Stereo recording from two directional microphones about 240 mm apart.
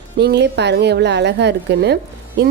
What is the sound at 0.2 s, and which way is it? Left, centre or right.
Speech, right.